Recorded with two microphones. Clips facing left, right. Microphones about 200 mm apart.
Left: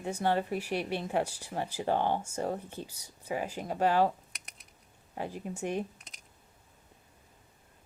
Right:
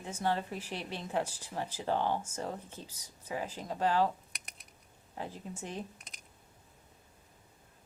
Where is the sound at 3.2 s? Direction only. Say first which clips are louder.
Left 4 dB; 10° left (ahead or behind).